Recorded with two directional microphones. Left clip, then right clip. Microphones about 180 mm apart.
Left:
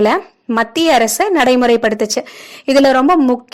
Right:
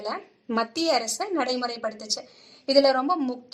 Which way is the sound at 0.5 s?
40° left (ahead or behind).